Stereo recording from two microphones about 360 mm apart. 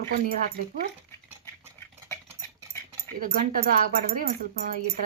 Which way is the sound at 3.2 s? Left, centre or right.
Right.